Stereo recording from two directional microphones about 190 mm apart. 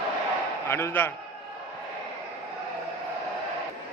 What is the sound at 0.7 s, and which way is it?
Speech, 10° left (ahead or behind).